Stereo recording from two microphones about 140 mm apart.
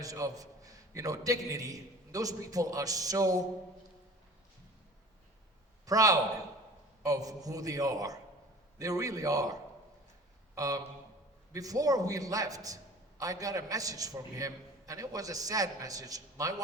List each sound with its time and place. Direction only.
0.0 s a man's voice: 25° right (ahead or behind)
5.8 s a man's voice: 25° right (ahead or behind)